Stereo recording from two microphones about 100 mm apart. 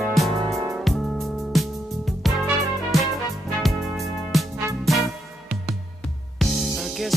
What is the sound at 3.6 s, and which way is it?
Music, centre (ahead or behind).